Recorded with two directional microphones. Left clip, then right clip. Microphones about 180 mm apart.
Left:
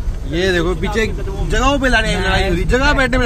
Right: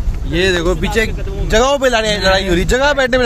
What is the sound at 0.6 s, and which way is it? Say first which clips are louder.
Speech: right 2 dB; 15° right (ahead or behind).